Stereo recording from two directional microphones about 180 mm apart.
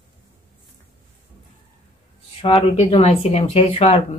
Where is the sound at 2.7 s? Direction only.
35° left (ahead or behind).